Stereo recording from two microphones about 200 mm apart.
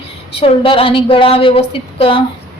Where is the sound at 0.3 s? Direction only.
25° left (ahead or behind).